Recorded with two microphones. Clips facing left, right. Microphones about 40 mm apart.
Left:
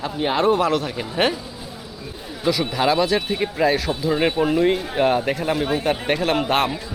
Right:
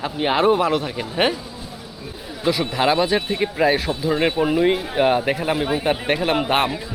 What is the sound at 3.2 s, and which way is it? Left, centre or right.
Speech, centre.